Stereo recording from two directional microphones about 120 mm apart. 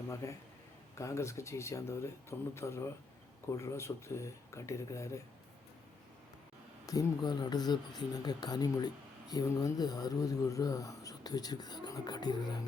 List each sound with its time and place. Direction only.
0.2 s speech: 25° left (ahead or behind)
6.8 s speech: 30° left (ahead or behind)